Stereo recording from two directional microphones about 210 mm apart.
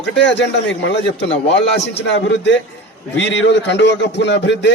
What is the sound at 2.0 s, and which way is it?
A man's voice, 60° left (ahead or behind).